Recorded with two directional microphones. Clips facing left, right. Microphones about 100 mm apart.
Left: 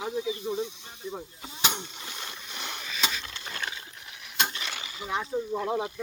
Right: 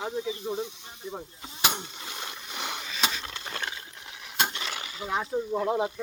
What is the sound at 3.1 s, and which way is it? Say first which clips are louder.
Wood: right 1 dB; 35° right (ahead or behind).